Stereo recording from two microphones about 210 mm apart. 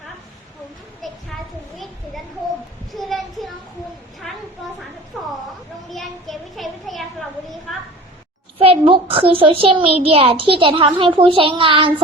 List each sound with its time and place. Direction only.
1.0 s children playing: centre (ahead or behind)
2.9 s a sound: centre (ahead or behind)
8.5 s a child's voice: 25° right (ahead or behind)